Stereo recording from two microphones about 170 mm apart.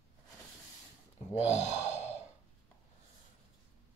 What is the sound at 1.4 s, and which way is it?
Speech, 40° left (ahead or behind).